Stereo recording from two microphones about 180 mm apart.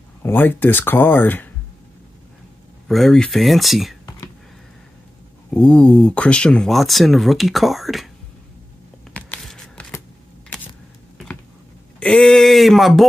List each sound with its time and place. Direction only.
0.2 s speech: 10° left (ahead or behind)
2.9 s speech: centre (ahead or behind)
5.5 s speech: 5° left (ahead or behind)
9.1 s shuffling cards: 5° left (ahead or behind)
12.0 s speech: 5° left (ahead or behind)